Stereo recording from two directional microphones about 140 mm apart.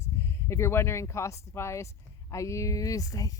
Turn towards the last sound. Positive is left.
turn(degrees=25)  # may be behind; listen again after turning